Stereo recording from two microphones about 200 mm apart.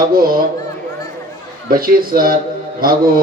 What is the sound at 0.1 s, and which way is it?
Speech, 45° right (ahead or behind).